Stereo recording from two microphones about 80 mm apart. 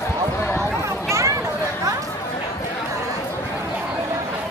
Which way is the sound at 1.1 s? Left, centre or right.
Right.